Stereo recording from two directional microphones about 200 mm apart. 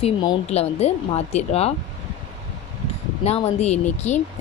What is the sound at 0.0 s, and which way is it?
Speech, 20° left (ahead or behind).